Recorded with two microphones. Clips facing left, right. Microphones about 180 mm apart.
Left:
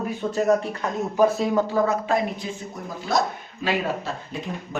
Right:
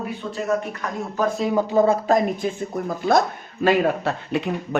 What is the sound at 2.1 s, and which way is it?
Speech, 45° right (ahead or behind).